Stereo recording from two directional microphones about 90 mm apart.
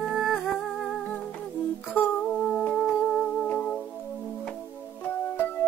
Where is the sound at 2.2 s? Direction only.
5° left (ahead or behind).